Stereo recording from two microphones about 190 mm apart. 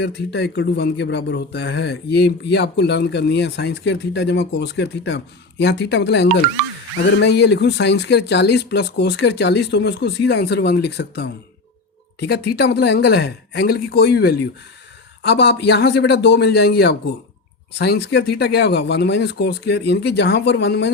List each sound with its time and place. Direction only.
0.0 s speech: 60° left (ahead or behind)